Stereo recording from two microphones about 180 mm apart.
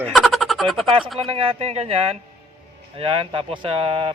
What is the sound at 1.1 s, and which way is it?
Speech, 30° right (ahead or behind).